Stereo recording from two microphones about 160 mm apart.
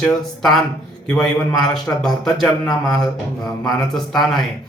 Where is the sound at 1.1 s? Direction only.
5° left (ahead or behind).